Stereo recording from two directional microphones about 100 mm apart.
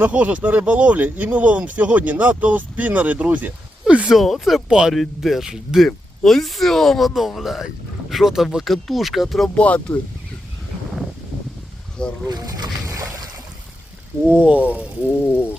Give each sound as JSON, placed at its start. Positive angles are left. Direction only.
{"t": 0.0, "sound": "speech", "side_deg": -15}
{"t": 9.6, "sound": "speech", "side_deg": 10}
{"t": 12.3, "sound": "splash", "side_deg": -45}
{"t": 14.3, "sound": "speech", "side_deg": -15}
{"t": 15.2, "sound": "speech", "side_deg": 20}